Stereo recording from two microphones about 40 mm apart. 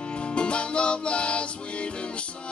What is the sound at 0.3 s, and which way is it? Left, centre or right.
Music, left.